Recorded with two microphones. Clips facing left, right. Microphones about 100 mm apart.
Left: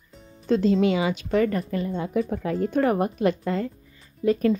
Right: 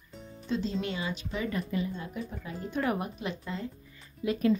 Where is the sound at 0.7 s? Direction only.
90° left; by 1.5 s 70° left (ahead or behind).